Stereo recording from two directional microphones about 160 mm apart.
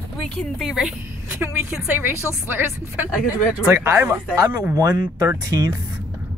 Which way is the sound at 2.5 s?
10° right (ahead or behind).